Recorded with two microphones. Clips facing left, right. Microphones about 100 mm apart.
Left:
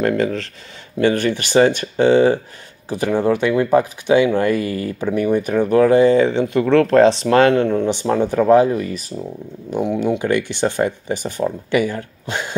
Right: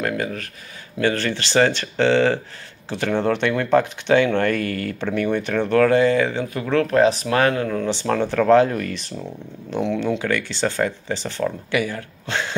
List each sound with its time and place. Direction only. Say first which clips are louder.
0.0 s speech: left 6 dB; 35° left (ahead or behind)
1.0 s speech: left 5 dB; 15° left (ahead or behind)
6.6 s speech: left 5 dB; 40° left (ahead or behind)
7.8 s speech: left 4 dB; 15° left (ahead or behind)